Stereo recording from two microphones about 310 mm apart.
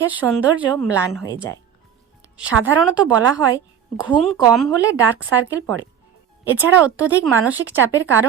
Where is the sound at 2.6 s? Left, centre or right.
Centre.